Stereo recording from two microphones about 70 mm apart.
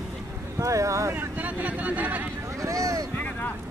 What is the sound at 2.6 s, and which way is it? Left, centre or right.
Vehicle, right.